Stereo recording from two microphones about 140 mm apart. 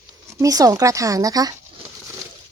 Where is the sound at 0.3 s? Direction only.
25° right (ahead or behind).